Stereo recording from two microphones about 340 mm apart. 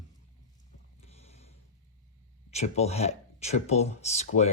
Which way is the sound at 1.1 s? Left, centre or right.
Centre.